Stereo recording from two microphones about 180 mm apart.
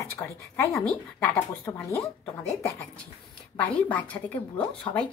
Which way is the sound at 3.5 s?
5° left (ahead or behind).